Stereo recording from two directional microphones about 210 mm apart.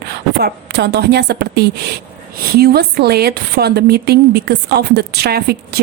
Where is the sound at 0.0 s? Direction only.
50° right (ahead or behind).